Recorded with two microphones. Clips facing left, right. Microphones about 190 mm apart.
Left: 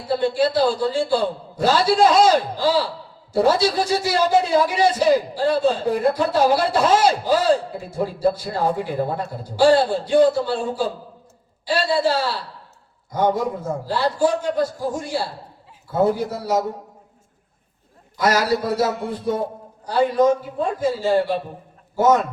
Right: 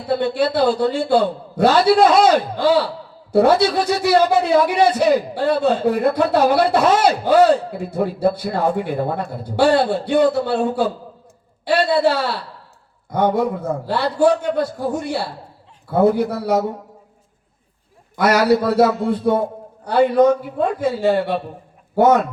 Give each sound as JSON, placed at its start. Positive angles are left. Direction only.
{"t": 0.1, "sound": "a man's voice", "side_deg": -60}
{"t": 18.2, "sound": "a man's voice", "side_deg": -60}